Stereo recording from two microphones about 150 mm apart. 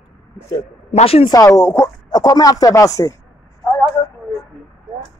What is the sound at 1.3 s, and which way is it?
Speech, 20° left (ahead or behind).